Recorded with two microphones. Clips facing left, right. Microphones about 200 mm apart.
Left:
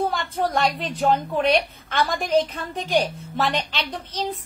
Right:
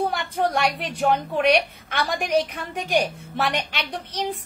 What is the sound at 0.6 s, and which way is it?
A child's voice, 15° right (ahead or behind).